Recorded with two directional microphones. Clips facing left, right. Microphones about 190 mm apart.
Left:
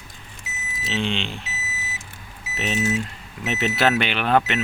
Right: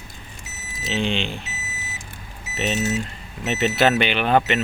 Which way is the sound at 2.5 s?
Centre (ahead or behind).